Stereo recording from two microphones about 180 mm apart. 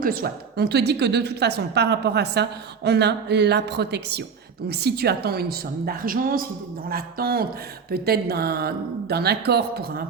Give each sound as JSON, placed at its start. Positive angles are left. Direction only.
{"t": 0.0, "sound": "a woman's voice", "side_deg": -55}